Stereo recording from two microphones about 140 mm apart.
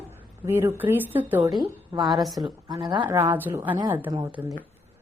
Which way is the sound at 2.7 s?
35° right (ahead or behind).